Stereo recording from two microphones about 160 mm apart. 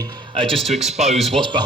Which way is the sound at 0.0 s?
35° right (ahead or behind).